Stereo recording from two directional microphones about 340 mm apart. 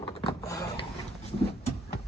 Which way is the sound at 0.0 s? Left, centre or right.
Centre.